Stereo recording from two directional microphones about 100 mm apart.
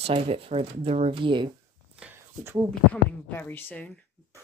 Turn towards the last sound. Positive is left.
turn(degrees=20)  # may be behind; listen again after turning